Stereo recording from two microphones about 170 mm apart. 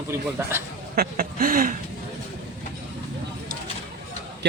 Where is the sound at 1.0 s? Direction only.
60° right (ahead or behind).